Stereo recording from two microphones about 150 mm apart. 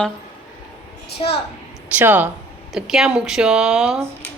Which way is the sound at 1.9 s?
10° right (ahead or behind).